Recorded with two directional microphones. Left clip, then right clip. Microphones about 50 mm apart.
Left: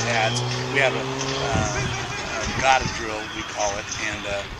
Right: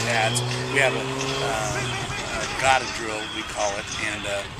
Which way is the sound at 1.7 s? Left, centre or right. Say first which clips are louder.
Even; centre.